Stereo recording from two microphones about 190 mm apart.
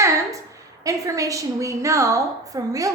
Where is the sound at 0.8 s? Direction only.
15° right (ahead or behind).